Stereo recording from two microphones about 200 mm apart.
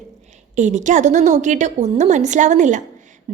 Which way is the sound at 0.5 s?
35° right (ahead or behind).